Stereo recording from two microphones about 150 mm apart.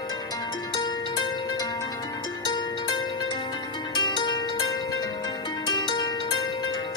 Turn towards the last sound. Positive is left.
turn(degrees=30)  # may be behind; listen again after turning